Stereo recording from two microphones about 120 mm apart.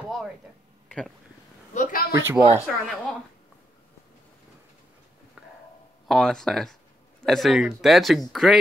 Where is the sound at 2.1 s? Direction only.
20° right (ahead or behind).